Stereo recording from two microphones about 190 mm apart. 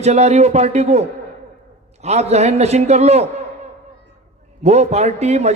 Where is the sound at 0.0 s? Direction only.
35° right (ahead or behind).